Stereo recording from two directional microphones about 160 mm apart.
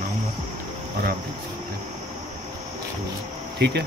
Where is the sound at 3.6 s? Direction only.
90° right.